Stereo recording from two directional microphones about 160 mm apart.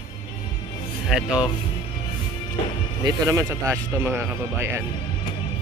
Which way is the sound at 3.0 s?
20° right (ahead or behind).